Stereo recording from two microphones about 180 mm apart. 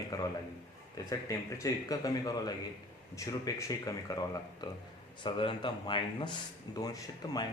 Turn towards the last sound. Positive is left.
turn(degrees=20)  # may be behind; listen again after turning